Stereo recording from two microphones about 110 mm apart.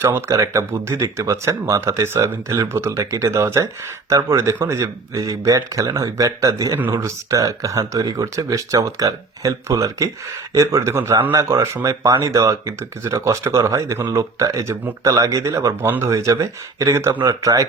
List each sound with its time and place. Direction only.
0.0 s speech: 20° right (ahead or behind)